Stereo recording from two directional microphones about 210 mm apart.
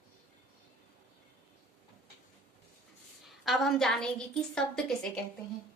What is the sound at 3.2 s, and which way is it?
A woman's voice, centre (ahead or behind).